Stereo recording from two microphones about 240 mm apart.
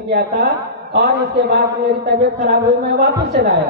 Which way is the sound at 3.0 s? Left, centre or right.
Right.